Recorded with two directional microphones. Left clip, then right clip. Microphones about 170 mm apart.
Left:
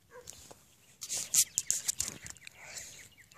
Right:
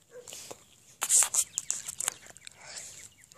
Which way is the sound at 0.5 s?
50° right (ahead or behind).